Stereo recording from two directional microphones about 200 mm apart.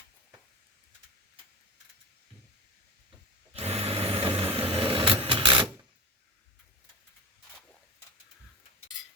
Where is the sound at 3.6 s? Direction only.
30° right (ahead or behind).